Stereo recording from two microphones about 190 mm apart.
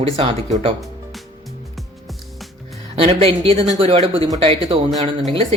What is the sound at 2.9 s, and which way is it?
Speech, 30° right (ahead or behind).